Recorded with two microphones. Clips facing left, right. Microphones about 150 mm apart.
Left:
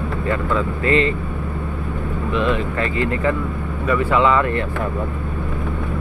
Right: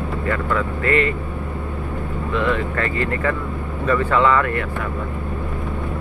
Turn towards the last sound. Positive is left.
turn(degrees=20)  # may be behind; listen again after turning